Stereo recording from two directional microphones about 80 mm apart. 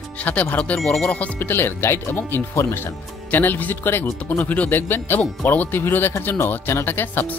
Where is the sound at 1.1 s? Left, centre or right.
Centre.